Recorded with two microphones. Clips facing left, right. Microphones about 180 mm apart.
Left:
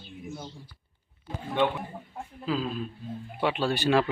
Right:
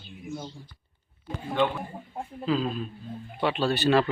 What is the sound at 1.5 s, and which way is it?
Speech, 20° left (ahead or behind).